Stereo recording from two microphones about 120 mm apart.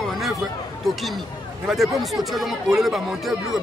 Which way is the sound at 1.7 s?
Centre (ahead or behind).